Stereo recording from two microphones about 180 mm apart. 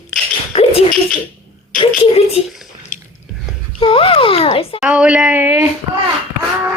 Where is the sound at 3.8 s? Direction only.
30° left (ahead or behind).